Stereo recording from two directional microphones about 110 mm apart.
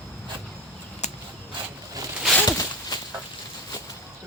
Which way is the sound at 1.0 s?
90° left.